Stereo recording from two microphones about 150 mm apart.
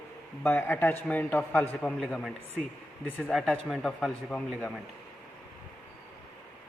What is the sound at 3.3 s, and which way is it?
Speech, centre (ahead or behind).